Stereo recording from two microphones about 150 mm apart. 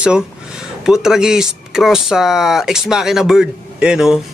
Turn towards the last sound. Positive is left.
turn(degrees=-5)  # may be behind; listen again after turning